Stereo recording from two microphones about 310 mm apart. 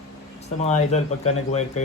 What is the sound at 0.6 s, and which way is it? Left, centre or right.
Speech, left.